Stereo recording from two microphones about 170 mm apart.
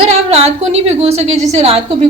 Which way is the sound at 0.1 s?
40° right (ahead or behind).